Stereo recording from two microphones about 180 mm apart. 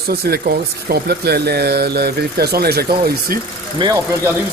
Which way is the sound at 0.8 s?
60° right (ahead or behind).